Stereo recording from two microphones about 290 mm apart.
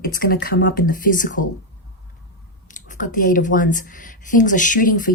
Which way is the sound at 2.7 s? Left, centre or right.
Left.